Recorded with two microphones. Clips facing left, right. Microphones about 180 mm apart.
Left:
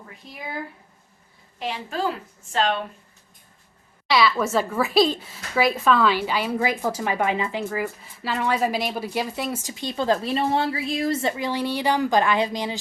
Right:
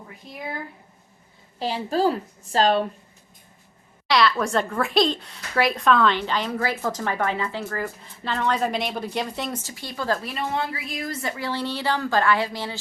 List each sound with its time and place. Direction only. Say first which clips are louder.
1.5 s a woman's voice: right 5 dB; 35° right (ahead or behind)
4.1 s speech: even; 5° left (ahead or behind)